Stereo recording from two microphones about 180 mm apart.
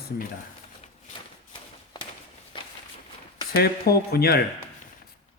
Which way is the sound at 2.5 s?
30° left (ahead or behind).